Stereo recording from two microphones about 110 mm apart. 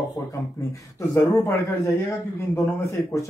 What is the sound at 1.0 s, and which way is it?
Speech, 25° left (ahead or behind).